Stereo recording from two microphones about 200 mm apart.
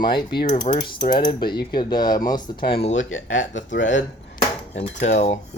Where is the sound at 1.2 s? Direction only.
20° left (ahead or behind).